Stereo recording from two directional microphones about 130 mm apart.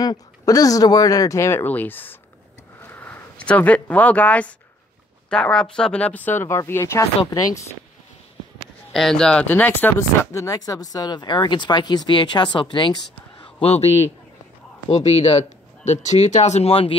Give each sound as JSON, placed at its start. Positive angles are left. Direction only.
{"t": 0.0, "sound": "speech", "side_deg": 30}
{"t": 8.9, "sound": "speech", "side_deg": 5}
{"t": 13.6, "sound": "a man's voice", "side_deg": 50}